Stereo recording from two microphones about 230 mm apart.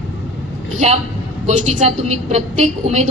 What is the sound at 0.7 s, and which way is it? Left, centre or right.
A woman's voice, right.